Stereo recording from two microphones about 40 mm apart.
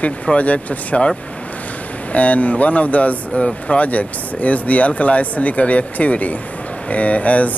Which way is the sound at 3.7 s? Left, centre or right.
Left.